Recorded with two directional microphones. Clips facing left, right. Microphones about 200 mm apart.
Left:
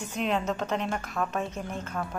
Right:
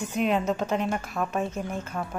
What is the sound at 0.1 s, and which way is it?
A woman's voice, 5° right (ahead or behind).